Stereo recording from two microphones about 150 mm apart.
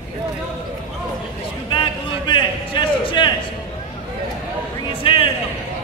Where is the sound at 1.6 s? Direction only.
30° left (ahead or behind).